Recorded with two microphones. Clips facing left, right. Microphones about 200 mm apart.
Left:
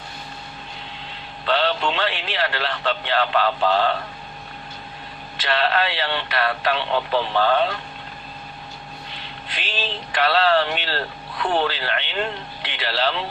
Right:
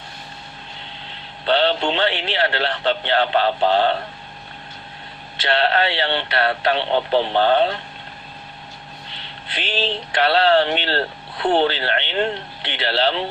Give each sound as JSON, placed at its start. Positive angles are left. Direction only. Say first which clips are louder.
{"t": 1.5, "sound": "a man's voice", "louder": "right 3 dB", "side_deg": -25}
{"t": 5.5, "sound": "a man's voice", "louder": "right 3 dB", "side_deg": -25}
{"t": 9.6, "sound": "a man's voice", "louder": "right 6 dB", "side_deg": -25}